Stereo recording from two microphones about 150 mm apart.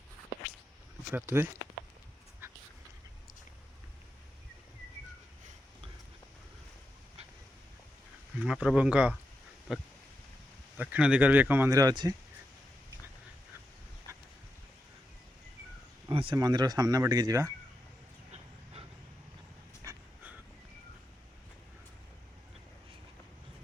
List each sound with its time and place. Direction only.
1.1 s speech: 15° right (ahead or behind)
8.4 s speech: 5° right (ahead or behind)
9.7 s a sound: centre (ahead or behind)
10.8 s speech: 10° right (ahead or behind)
11.7 s speech: 25° right (ahead or behind)
16.0 s speech: 35° right (ahead or behind)
18.3 s dog: 45° right (ahead or behind)
19.8 s a sound: 20° right (ahead or behind)